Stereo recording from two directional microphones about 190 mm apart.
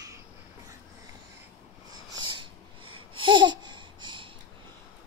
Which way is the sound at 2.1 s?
25° right (ahead or behind).